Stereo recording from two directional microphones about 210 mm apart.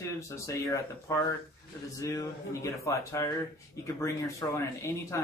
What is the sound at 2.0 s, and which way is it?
Speech, 15° left (ahead or behind).